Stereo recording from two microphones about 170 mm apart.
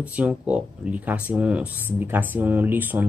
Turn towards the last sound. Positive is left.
turn(degrees=-10)  # may be behind; listen again after turning